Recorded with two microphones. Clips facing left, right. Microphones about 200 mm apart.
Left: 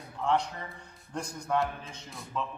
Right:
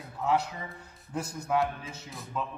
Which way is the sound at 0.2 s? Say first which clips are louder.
Right 1 dB; 5° right (ahead or behind).